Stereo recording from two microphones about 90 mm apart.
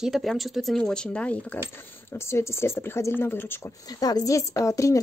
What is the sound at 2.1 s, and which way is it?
Speech, 30° left (ahead or behind).